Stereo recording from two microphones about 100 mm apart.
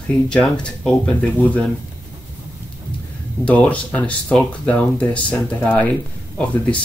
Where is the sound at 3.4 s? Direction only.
15° left (ahead or behind).